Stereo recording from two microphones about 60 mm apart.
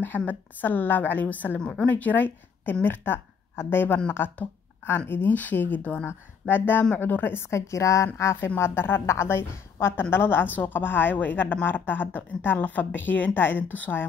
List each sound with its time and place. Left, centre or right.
0.3 s a woman's voice: left
8.5 s a woman's voice: left